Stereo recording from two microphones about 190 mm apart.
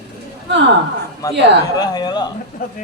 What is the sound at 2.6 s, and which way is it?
Speech, 45° left (ahead or behind).